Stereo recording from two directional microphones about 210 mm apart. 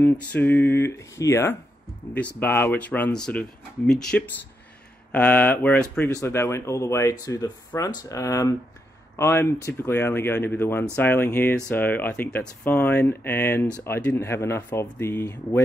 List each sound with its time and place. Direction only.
0.0 s speech: 10° left (ahead or behind)